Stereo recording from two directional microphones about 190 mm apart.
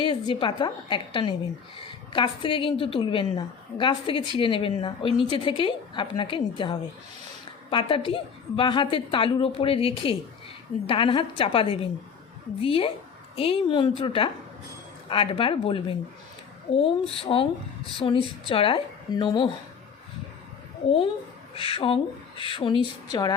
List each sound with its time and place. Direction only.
0.0 s a woman's voice: 25° left (ahead or behind)
20.8 s a woman's voice: 30° left (ahead or behind)